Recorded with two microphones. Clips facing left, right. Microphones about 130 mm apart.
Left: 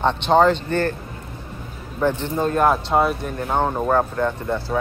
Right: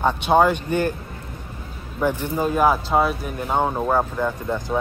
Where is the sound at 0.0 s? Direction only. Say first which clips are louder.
Left 1 dB; 10° right (ahead or behind).